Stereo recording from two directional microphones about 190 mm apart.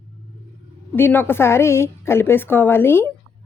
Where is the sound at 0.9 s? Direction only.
10° left (ahead or behind).